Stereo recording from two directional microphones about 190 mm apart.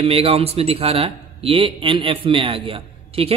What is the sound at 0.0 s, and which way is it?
Speech, 30° right (ahead or behind).